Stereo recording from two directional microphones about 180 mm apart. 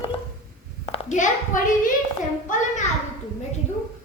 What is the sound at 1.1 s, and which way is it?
A child's voice, 45° left (ahead or behind).